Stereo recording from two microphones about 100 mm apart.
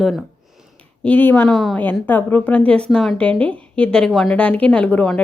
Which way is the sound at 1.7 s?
20° left (ahead or behind).